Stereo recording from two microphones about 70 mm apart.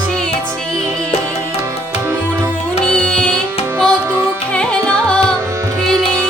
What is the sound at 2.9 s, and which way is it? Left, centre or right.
Music, centre.